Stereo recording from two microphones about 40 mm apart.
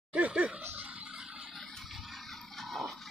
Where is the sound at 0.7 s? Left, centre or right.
Right.